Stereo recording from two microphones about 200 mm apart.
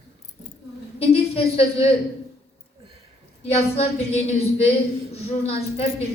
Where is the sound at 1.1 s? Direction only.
30° left (ahead or behind).